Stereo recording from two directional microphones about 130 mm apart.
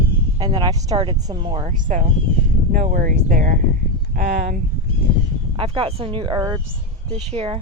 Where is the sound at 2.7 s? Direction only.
85° right.